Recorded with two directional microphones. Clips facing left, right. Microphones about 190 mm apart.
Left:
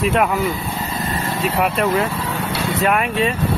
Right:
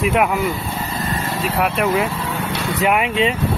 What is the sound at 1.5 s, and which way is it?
Speech, centre (ahead or behind).